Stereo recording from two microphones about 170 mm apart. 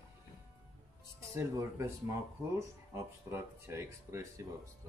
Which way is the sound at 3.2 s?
15° right (ahead or behind).